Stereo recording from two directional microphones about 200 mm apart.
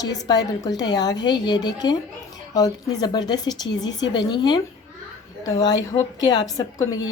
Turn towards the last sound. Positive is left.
turn(degrees=20)  # may be behind; listen again after turning